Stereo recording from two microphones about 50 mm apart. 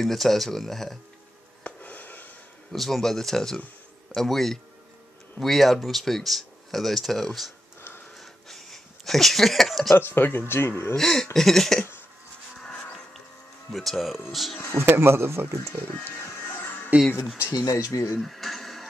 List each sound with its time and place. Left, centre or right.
0.0 s speech: centre
1.6 s a sound: left
2.7 s speech: centre
8.2 s a sound: centre
9.9 s speech: left
11.0 s speech: centre
13.7 s speech: centre
14.7 s speech: right
16.5 s music: left
17.5 s speech: left
18.2 s a sound: centre